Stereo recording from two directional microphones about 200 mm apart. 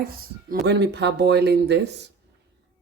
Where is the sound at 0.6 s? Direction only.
55° right (ahead or behind).